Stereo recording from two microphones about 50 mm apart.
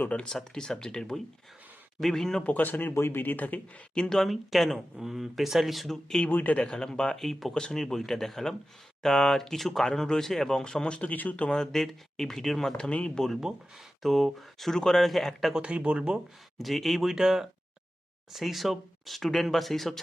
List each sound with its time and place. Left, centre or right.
0.1 s speech: centre
2.4 s speech: left
2.9 s speech: left
3.9 s speech: centre
4.3 s speech: centre
6.2 s speech: left
6.6 s speech: centre
7.2 s speech: centre; by 11.1 s left
11.1 s speech: left
11.4 s speech: centre
12.7 s speech: left
14.0 s speech: centre
15.5 s speech: right
16.6 s speech: centre